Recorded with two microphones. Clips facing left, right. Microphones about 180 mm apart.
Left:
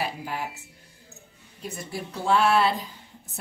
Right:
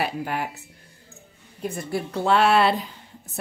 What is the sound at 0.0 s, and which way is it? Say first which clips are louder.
Speech: right 4 dB; 60° right (ahead or behind).